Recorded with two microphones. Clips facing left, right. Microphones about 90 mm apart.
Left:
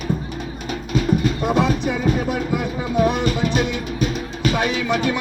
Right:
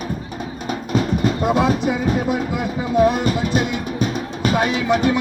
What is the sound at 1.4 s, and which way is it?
Music, 15° right (ahead or behind).